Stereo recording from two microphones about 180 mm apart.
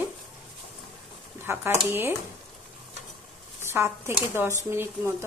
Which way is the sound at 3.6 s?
15° right (ahead or behind).